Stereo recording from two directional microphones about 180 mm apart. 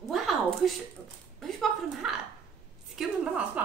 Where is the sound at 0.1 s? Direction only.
Centre (ahead or behind).